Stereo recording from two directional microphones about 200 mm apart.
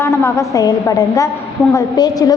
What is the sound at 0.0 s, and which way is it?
A woman's voice, 15° left (ahead or behind).